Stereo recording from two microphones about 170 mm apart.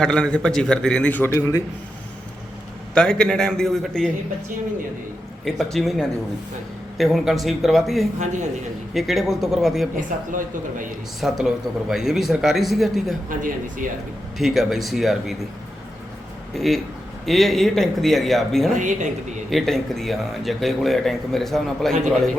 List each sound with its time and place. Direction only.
0.0 s a man's voice: 5° left (ahead or behind)
2.9 s a man's voice: 5° left (ahead or behind)
5.5 s a man's voice: centre (ahead or behind)
8.2 s speech: 45° right (ahead or behind)
8.9 s a man's voice: centre (ahead or behind)
11.2 s a man's voice: centre (ahead or behind)
13.3 s speech: 50° right (ahead or behind)
14.3 s a man's voice: centre (ahead or behind)
16.6 s a man's voice: centre (ahead or behind)
18.7 s speech: 45° right (ahead or behind)
19.5 s a man's voice: centre (ahead or behind)